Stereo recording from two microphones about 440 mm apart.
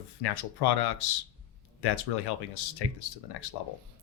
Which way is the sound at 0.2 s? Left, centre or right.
Left.